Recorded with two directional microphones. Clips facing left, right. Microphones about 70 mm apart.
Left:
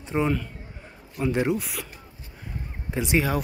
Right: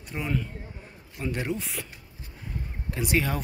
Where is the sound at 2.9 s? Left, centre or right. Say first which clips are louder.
Left 3 dB; centre.